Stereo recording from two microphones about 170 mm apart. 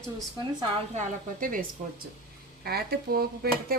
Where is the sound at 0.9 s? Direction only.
55° right (ahead or behind).